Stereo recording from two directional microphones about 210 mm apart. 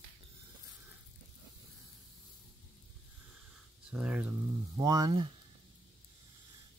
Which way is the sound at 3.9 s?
5° right (ahead or behind).